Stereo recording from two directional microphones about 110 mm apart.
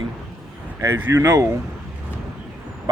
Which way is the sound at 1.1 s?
30° right (ahead or behind).